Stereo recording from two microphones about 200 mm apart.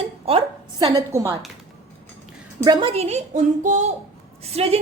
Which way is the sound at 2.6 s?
20° right (ahead or behind).